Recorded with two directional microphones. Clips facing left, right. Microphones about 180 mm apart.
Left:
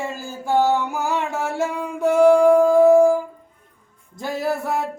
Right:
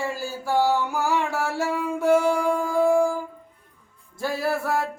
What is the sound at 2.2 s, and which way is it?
Music, 55° left (ahead or behind).